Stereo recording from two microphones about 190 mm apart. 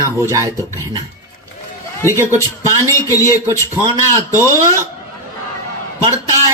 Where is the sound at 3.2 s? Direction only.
15° right (ahead or behind).